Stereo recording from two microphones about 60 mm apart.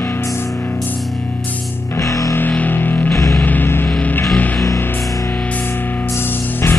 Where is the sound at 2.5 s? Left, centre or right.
Left.